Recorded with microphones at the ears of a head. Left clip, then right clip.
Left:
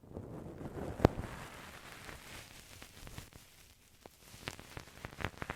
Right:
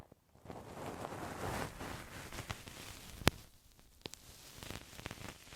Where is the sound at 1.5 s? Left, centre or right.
Right.